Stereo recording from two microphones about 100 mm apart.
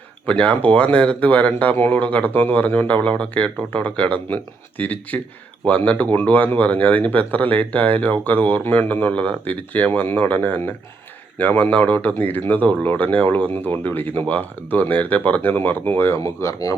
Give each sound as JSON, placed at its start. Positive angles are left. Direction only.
{"t": 0.3, "sound": "speech", "side_deg": 15}